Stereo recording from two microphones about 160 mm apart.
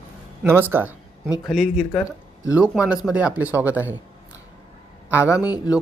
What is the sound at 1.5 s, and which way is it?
Speech, centre (ahead or behind).